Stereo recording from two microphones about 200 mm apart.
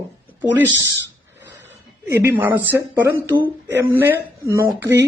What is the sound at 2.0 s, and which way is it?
A woman's voice, 10° right (ahead or behind).